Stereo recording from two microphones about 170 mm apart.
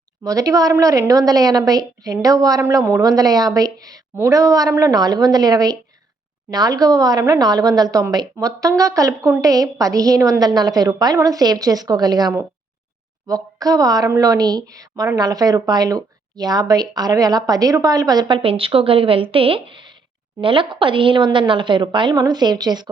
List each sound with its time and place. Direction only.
0.3 s a woman's voice: 20° right (ahead or behind)